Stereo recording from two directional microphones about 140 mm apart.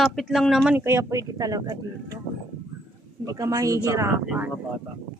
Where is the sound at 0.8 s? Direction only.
15° right (ahead or behind).